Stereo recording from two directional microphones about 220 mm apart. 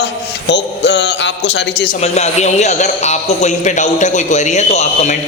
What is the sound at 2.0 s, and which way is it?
A man's voice, 30° left (ahead or behind).